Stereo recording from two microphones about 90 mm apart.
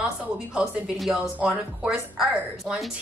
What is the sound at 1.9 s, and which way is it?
Speech, 5° right (ahead or behind).